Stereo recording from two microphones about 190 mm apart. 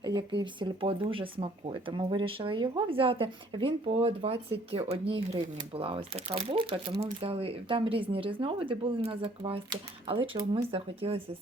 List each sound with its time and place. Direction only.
0.0 s speech: 25° right (ahead or behind)